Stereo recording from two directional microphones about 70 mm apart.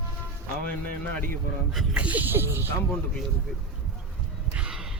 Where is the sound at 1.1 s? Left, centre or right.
Left.